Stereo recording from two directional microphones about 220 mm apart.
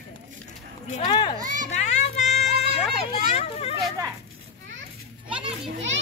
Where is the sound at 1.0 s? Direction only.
20° left (ahead or behind).